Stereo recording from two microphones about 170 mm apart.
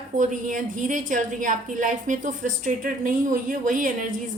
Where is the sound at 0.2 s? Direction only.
50° right (ahead or behind).